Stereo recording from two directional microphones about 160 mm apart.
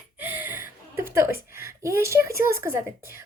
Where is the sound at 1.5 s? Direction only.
15° right (ahead or behind).